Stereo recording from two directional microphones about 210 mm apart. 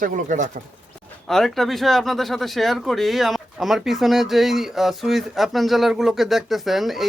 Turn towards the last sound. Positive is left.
turn(degrees=0)  # may be behind; listen again after turning